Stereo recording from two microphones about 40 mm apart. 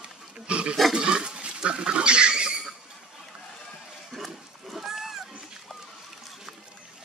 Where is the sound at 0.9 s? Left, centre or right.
Right.